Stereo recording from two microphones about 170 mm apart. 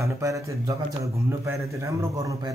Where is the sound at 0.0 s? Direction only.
20° right (ahead or behind).